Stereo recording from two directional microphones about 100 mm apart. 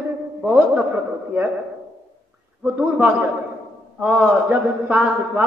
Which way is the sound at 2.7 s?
15° right (ahead or behind).